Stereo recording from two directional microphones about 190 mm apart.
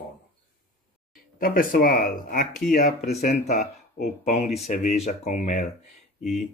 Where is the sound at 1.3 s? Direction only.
45° left (ahead or behind).